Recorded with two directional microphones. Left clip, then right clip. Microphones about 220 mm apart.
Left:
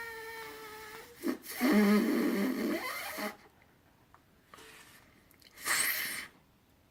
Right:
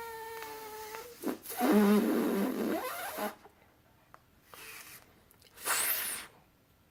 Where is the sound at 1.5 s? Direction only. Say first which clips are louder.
Right 1 dB; 20° right (ahead or behind).